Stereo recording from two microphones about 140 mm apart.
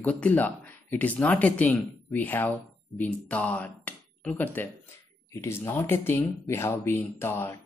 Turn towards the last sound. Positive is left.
turn(degrees=15)  # may be behind; listen again after turning